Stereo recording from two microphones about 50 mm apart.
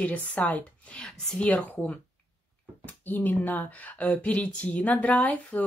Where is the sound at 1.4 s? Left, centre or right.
Left.